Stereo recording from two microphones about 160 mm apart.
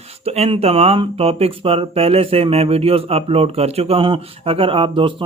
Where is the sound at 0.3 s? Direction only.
40° right (ahead or behind).